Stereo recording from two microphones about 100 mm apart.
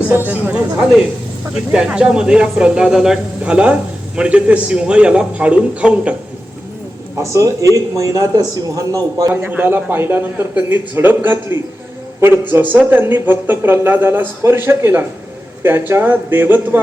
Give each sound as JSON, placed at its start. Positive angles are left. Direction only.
{"t": 0.1, "sound": "a man's voice", "side_deg": -20}
{"t": 7.2, "sound": "a man's voice", "side_deg": -30}
{"t": 9.3, "sound": "speech", "side_deg": -20}